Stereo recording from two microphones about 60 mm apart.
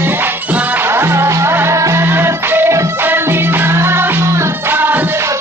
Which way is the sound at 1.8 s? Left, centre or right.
Right.